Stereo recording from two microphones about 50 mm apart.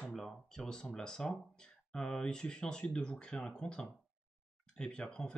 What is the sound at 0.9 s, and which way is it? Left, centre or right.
Speech, centre.